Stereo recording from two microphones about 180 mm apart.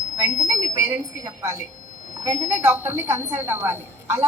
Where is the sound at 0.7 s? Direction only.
15° right (ahead or behind).